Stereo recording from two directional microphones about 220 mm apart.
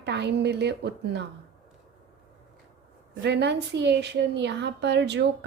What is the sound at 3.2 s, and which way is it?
A woman's voice, 50° right (ahead or behind).